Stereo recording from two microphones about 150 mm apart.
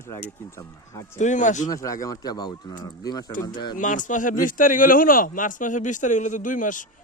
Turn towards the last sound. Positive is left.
turn(degrees=60)  # may be behind; listen again after turning